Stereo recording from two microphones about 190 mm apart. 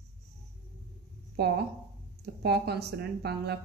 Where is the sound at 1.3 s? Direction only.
60° right (ahead or behind).